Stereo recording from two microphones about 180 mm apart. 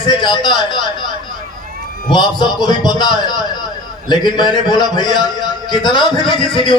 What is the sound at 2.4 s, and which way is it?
A man's voice, 25° left (ahead or behind).